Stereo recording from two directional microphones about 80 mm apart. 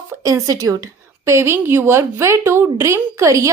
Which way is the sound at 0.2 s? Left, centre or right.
Right.